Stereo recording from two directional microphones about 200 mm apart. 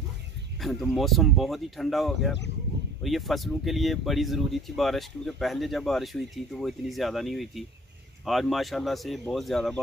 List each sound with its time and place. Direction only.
0.6 s speech: centre (ahead or behind)